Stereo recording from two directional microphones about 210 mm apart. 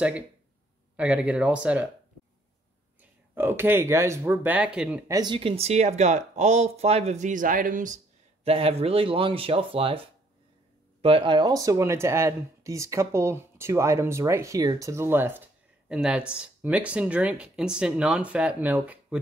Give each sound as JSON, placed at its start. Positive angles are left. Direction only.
{"t": 0.9, "sound": "speech", "side_deg": -5}
{"t": 3.0, "sound": "speech", "side_deg": -10}
{"t": 5.1, "sound": "speech", "side_deg": -20}